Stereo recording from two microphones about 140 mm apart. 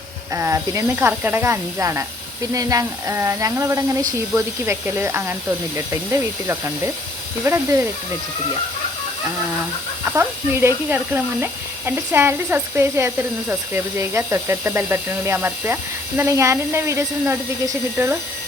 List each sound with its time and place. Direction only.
0.3 s speech: 20° right (ahead or behind)
10.1 s speech: 20° right (ahead or behind)